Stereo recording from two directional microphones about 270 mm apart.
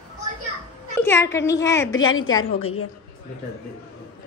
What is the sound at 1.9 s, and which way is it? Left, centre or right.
Speech, left.